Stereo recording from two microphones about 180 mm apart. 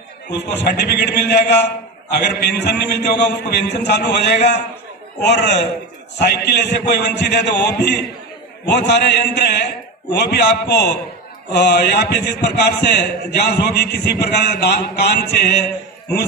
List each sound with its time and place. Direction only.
0.3 s a man's voice: 70° left (ahead or behind)